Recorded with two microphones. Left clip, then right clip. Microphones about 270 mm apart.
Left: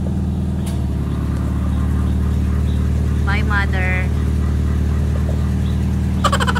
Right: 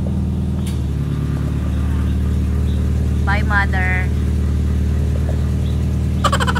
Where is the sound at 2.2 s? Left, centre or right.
Centre.